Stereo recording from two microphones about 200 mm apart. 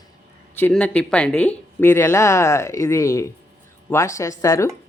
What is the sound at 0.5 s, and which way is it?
Speech, 10° left (ahead or behind).